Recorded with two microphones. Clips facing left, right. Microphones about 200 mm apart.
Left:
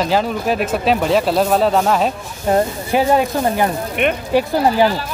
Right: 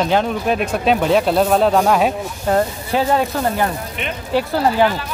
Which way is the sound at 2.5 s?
15° left (ahead or behind).